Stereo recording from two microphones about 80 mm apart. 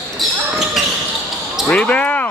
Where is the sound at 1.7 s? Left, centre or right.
Centre.